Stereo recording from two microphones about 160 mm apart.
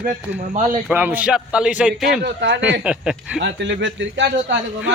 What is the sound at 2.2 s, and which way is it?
Speech, 90° right.